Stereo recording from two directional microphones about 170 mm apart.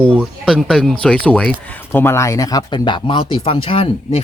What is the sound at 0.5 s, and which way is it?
Speech, 5° left (ahead or behind).